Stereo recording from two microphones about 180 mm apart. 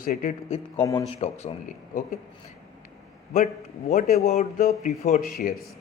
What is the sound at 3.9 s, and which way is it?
A man's voice, 40° left (ahead or behind).